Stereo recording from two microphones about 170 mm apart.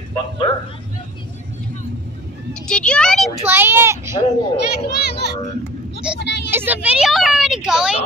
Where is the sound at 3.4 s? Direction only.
10° right (ahead or behind).